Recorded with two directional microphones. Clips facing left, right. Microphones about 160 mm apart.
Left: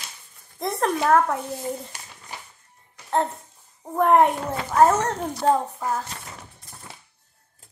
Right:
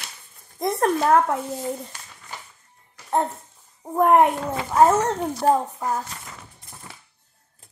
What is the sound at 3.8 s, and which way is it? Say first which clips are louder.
A child's voice: right 1 dB; 10° right (ahead or behind).